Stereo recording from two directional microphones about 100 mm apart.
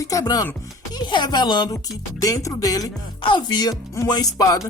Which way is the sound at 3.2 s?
50° left (ahead or behind).